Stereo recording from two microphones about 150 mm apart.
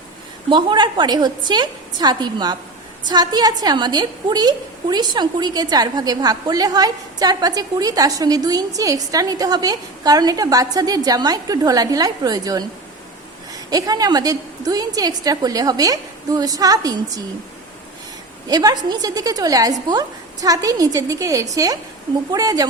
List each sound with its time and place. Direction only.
0.5 s a woman's voice: 30° right (ahead or behind)
18.4 s a woman's voice: 25° right (ahead or behind)